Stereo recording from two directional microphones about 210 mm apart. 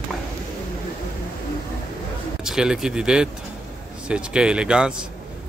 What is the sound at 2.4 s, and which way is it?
Speech, 5° right (ahead or behind).